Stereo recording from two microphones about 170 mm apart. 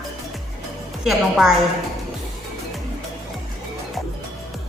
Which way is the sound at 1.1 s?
Centre (ahead or behind).